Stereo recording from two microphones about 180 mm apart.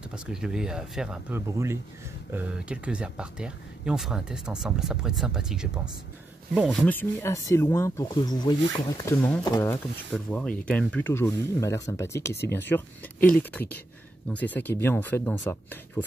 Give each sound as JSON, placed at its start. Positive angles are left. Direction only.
{"t": 0.1, "sound": "speech", "side_deg": -5}
{"t": 6.8, "sound": "speech", "side_deg": 10}